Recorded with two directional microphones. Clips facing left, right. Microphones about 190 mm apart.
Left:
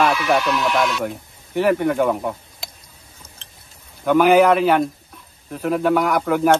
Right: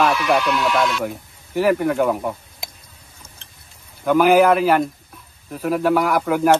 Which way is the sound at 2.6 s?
15° right (ahead or behind).